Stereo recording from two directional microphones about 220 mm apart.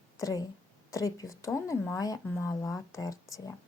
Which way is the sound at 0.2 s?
15° left (ahead or behind).